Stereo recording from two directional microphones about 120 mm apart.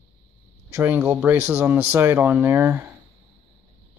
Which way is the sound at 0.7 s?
20° right (ahead or behind).